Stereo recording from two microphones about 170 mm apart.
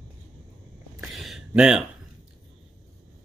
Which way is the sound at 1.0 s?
Centre (ahead or behind).